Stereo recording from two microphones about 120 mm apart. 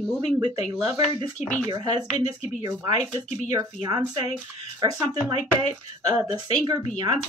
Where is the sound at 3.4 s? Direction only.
30° right (ahead or behind).